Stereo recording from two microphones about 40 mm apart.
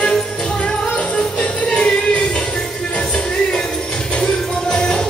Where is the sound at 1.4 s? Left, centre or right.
Left.